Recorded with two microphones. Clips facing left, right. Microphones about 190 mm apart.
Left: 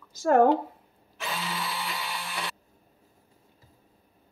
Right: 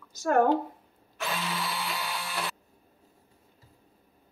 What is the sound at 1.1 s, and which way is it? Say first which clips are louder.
Tools: right 1 dB; centre (ahead or behind).